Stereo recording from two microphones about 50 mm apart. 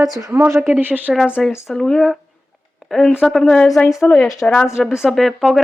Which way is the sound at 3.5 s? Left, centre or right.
Left.